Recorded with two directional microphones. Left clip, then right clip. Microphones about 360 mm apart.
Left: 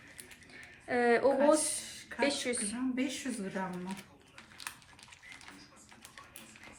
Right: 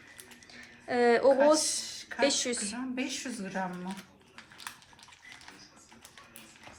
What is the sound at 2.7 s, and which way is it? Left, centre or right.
Speech, right.